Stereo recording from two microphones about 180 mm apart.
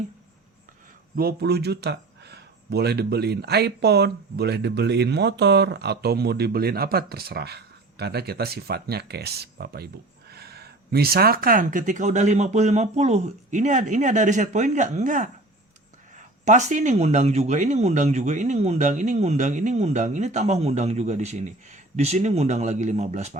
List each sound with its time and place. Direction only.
1.1 s speech: 60° right (ahead or behind); by 23.4 s 40° right (ahead or behind)